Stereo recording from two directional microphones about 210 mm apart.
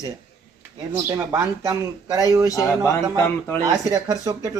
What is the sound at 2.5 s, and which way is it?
Speech, 15° left (ahead or behind).